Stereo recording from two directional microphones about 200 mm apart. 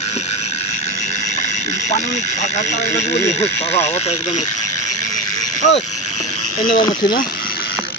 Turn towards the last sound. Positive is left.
turn(degrees=20)  # may be behind; listen again after turning